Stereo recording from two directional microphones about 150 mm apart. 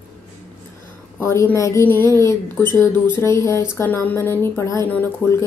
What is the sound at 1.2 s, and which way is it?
Speech, 20° left (ahead or behind).